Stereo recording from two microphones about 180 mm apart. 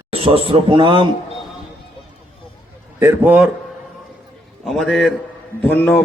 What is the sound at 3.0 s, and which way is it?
Speech, 10° right (ahead or behind).